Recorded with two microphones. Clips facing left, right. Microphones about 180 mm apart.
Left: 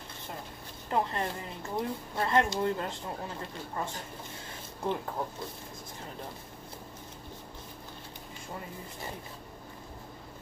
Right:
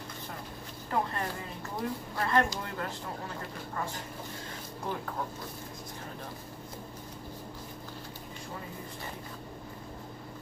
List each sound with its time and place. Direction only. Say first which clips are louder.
0.8 s speech: left 2 dB; 20° left (ahead or behind)